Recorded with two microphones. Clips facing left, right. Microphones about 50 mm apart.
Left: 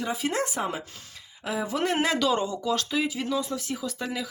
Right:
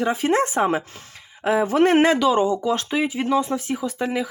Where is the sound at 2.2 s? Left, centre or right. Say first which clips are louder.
Right 7 dB; centre.